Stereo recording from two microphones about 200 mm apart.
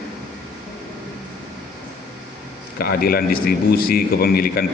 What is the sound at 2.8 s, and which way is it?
A man's voice, 50° left (ahead or behind).